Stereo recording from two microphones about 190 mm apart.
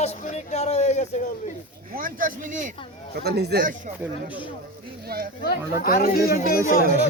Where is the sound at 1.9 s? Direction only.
50° right (ahead or behind).